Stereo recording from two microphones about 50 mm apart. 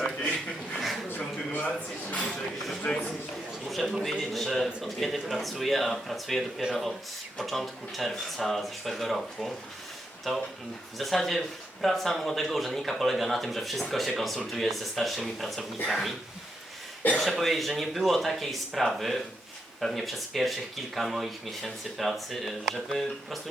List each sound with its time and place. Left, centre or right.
0.2 s a sound: left
1.5 s a man's voice: left
3.7 s speech: centre
17.2 s speech: centre